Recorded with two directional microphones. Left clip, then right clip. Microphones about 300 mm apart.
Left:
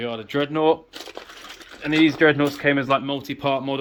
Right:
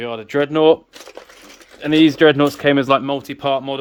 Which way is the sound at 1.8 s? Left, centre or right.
Right.